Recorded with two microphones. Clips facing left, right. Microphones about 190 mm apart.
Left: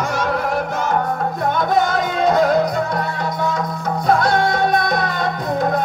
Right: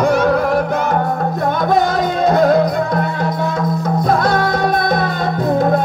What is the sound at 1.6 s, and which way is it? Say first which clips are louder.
Music: right 3 dB; 35° right (ahead or behind).